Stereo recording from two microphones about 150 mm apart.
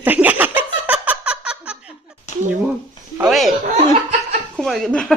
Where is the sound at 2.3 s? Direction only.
50° left (ahead or behind).